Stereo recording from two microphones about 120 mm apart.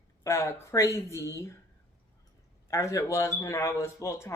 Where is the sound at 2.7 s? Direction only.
25° left (ahead or behind).